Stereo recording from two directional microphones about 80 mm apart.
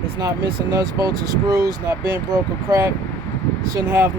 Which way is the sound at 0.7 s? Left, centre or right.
Right.